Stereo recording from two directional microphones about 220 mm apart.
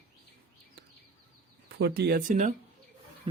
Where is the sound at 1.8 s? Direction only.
45° right (ahead or behind).